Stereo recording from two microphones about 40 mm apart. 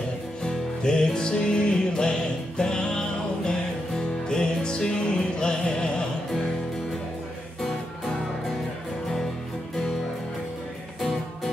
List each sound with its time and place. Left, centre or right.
0.4 s music: left
11.0 s music: centre